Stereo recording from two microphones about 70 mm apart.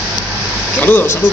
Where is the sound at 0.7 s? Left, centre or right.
Left.